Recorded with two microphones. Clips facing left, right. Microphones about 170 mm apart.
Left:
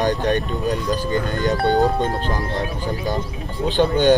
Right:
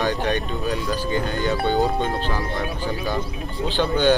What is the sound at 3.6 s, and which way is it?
Speech, 20° left (ahead or behind).